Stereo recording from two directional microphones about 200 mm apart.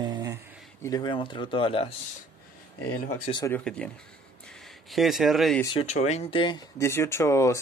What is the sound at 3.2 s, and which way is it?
Speech, 20° left (ahead or behind).